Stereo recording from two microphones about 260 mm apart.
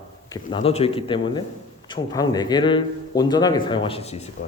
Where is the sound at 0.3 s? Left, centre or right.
Centre.